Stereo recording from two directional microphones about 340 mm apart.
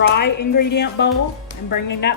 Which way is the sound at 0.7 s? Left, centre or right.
Left.